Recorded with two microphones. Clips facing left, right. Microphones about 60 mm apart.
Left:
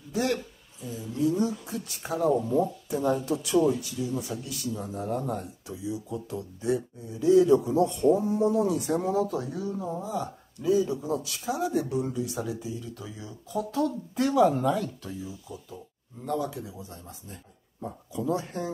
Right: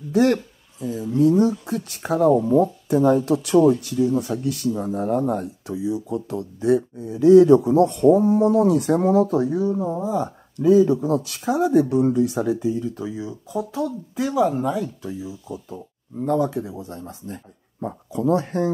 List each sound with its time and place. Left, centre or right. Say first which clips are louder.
0.1 s speech: right 10 dB; right
9.4 s speech: right 11 dB; right
10.1 s speech: right 8 dB; right
12.8 s speech: right 12 dB; right; by 15.3 s centre
15.4 s speech: right 8 dB; right
16.3 s speech: right 9 dB; right